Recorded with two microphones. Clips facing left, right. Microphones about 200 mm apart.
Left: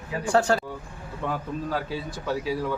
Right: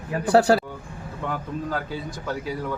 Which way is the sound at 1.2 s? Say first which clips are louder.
Even; 5° left (ahead or behind).